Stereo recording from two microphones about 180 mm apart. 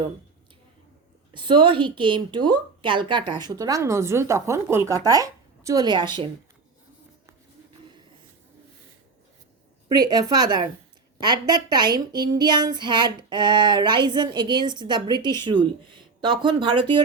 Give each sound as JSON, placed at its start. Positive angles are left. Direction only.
{"t": 1.3, "sound": "a woman's voice", "side_deg": -25}
{"t": 9.9, "sound": "a woman's voice", "side_deg": -20}